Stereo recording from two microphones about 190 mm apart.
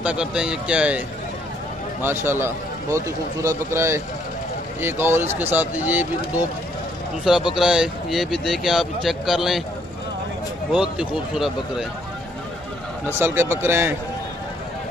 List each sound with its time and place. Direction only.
0.0 s speech: 5° right (ahead or behind)
7.5 s speech: 5° right (ahead or behind)
10.7 s speech: 5° right (ahead or behind)
13.0 s speech: 10° right (ahead or behind)